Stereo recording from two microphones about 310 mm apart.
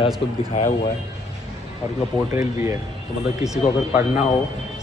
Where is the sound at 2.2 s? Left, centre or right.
Centre.